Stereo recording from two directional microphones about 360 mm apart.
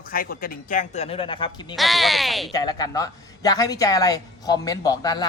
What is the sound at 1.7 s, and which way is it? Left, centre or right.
Speech, centre.